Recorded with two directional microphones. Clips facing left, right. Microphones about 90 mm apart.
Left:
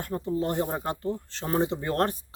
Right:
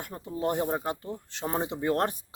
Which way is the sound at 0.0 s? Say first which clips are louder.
Left 3 dB; 10° right (ahead or behind).